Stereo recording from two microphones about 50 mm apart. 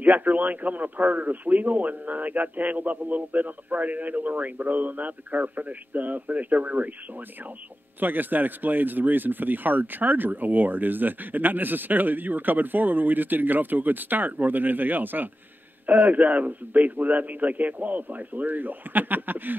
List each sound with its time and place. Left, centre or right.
0.0 s speech: right
8.0 s speech: right